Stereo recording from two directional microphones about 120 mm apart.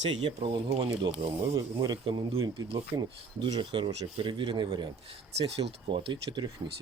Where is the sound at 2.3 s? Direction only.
50° right (ahead or behind).